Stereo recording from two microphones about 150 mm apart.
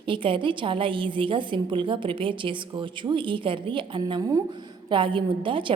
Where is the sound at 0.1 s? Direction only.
35° right (ahead or behind).